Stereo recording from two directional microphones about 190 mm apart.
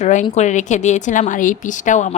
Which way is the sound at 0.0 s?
40° left (ahead or behind).